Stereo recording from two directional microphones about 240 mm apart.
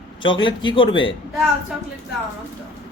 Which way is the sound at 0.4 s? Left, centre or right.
Centre.